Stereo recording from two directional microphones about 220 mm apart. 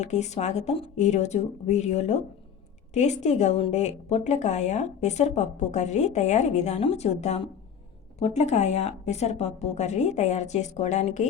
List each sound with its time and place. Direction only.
0.0 s a woman's voice: 30° left (ahead or behind)